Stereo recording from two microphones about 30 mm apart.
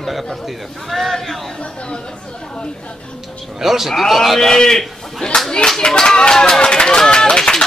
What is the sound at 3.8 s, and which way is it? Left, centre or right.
A man's voice, centre.